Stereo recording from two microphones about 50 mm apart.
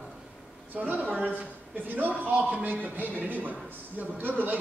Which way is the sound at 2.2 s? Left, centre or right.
Right.